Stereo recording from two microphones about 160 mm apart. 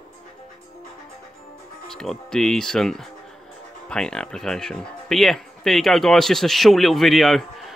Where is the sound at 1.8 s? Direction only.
Centre (ahead or behind).